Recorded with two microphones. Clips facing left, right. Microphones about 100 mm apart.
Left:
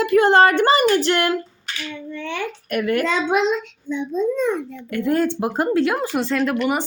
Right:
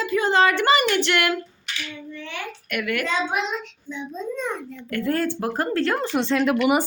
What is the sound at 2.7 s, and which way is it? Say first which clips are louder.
Speech: left 6 dB; 35° left (ahead or behind).